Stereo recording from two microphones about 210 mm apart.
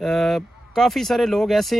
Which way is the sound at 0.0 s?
Centre (ahead or behind).